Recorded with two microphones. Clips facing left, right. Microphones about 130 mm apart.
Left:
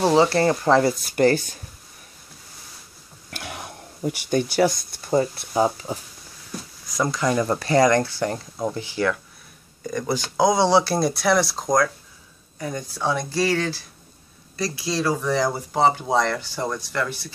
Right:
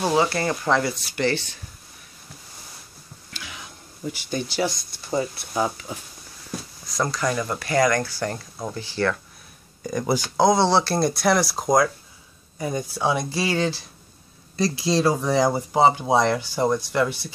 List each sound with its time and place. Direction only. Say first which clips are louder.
0.1 s speech: left 4 dB; 30° left (ahead or behind)
1.0 s speech: left 6 dB; 45° left (ahead or behind)
3.3 s a sound: left 6 dB; 60° left (ahead or behind)
5.5 s speech: left 5 dB; 30° left (ahead or behind)
6.9 s speech: left 2 dB; 15° left (ahead or behind)
9.8 s speech: right 2 dB; 5° right (ahead or behind)
10.3 s speech: left 1 dB; 10° left (ahead or behind); by 17.3 s 15° right (ahead or behind)